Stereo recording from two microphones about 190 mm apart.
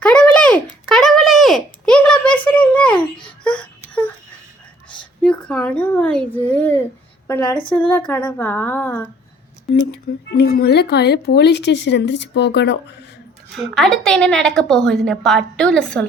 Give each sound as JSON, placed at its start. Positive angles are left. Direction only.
{"t": 0.0, "sound": "a sound", "side_deg": 5}
{"t": 3.4, "sound": "baby cry", "side_deg": 5}
{"t": 5.2, "sound": "a sound", "side_deg": 5}
{"t": 7.3, "sound": "a woman's voice", "side_deg": 10}
{"t": 10.3, "sound": "speech", "side_deg": 55}
{"t": 13.5, "sound": "a woman's voice", "side_deg": 0}